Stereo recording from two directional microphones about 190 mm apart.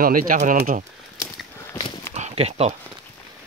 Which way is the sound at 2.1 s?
35° right (ahead or behind).